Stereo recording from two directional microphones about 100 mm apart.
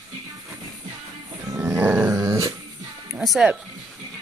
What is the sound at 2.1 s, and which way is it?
Dog, 30° right (ahead or behind).